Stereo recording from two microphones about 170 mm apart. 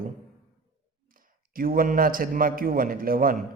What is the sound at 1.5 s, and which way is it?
A man's voice, 55° right (ahead or behind).